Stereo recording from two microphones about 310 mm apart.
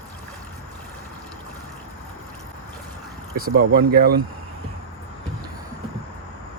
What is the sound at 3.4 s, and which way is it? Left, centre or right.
Speech, right.